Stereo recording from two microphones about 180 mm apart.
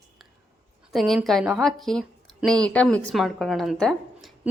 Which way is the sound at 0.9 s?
Centre (ahead or behind).